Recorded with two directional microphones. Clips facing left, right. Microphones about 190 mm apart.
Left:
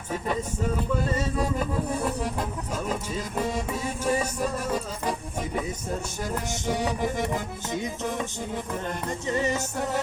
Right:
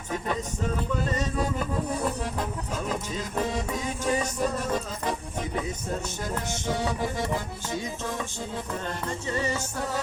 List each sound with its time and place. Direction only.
1.1 s music: 10° left (ahead or behind)
3.5 s music: 5° left (ahead or behind)
6.5 s music: 15° left (ahead or behind)
9.2 s music: 20° left (ahead or behind)